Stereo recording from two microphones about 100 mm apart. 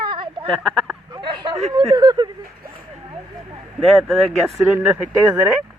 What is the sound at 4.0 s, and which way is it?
Speech, centre (ahead or behind).